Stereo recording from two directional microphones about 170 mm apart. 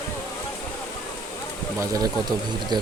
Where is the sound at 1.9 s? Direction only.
25° right (ahead or behind).